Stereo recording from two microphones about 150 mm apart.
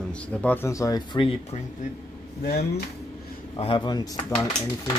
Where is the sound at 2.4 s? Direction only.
90° left.